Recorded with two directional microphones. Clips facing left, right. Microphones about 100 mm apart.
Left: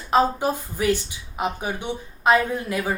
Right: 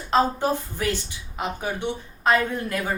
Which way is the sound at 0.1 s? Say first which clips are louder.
Left 1 dB; 10° left (ahead or behind).